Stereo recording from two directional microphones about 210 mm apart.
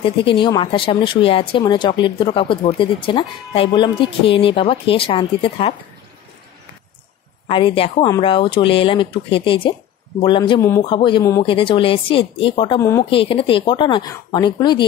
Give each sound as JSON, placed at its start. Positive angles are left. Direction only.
{"t": 0.0, "sound": "speech", "side_deg": 25}
{"t": 7.4, "sound": "speech", "side_deg": 25}